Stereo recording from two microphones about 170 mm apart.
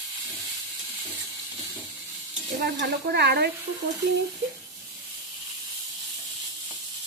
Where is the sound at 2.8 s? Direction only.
70° right (ahead or behind).